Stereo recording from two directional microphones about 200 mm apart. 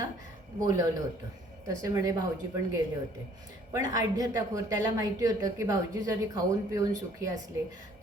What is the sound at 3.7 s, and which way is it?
A woman's voice, 15° right (ahead or behind).